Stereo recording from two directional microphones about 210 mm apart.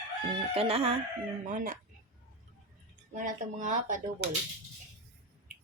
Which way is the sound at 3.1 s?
35° right (ahead or behind).